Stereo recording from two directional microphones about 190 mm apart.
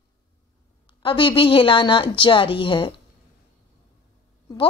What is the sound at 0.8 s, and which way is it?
Speech, 25° left (ahead or behind).